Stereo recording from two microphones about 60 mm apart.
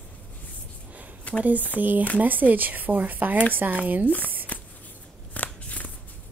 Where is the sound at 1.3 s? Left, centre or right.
Left.